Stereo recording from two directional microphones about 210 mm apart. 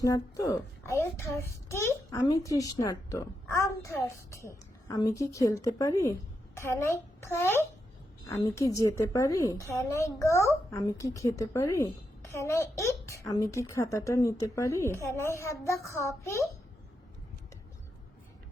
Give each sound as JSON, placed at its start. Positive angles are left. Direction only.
{"t": 0.0, "sound": "a woman's voice", "side_deg": 15}